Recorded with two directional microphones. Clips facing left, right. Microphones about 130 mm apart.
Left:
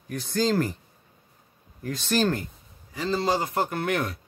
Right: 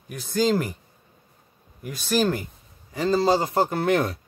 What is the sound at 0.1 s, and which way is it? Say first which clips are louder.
Speech: right 2 dB; 15° right (ahead or behind).